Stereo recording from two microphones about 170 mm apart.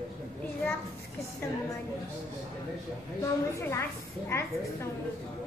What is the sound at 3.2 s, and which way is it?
Speech, 15° left (ahead or behind).